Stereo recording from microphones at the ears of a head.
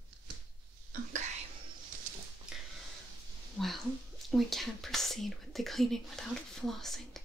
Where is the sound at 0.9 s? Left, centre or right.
Right.